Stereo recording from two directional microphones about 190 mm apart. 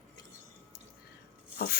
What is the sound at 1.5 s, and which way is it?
Rub, 50° left (ahead or behind).